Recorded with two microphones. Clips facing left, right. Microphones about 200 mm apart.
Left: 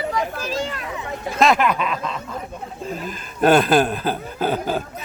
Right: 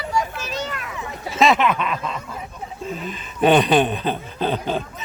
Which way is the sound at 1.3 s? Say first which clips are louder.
Even; centre (ahead or behind).